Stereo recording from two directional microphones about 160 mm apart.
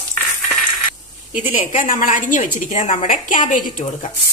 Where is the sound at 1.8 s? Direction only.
55° left (ahead or behind).